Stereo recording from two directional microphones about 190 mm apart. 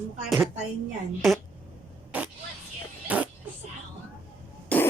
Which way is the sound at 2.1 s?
10° right (ahead or behind).